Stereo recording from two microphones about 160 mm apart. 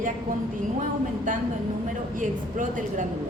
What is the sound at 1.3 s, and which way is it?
A woman's voice, 55° right (ahead or behind).